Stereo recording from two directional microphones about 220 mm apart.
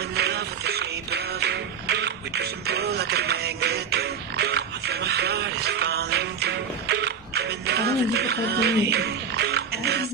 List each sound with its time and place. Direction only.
0.1 s music: 45° right (ahead or behind)